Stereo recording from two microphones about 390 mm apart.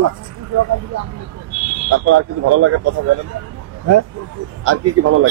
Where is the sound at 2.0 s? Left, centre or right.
Right.